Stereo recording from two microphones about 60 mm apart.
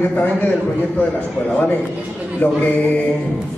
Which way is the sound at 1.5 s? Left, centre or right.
Left.